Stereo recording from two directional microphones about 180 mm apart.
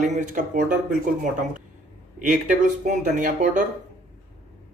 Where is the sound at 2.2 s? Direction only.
45° right (ahead or behind).